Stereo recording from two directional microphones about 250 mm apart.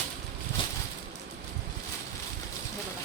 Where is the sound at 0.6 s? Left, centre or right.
Centre.